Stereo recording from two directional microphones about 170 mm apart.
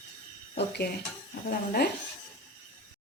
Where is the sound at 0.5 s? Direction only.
75° left (ahead or behind).